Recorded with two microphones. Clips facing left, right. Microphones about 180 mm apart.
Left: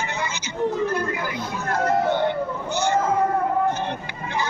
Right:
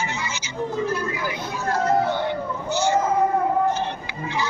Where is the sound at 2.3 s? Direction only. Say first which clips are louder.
Left 1 dB; 55° left (ahead or behind).